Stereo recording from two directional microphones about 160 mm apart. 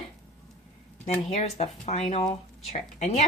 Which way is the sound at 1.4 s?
40° left (ahead or behind).